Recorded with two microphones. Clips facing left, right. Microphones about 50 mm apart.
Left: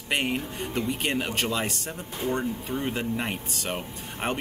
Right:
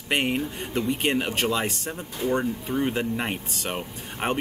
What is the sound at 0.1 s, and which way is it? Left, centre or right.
Speech, centre.